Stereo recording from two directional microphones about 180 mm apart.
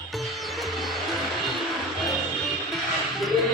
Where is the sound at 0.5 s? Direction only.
Centre (ahead or behind).